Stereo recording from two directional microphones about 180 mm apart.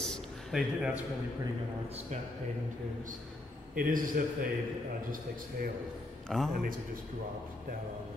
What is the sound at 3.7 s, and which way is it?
Mantra, 50° right (ahead or behind).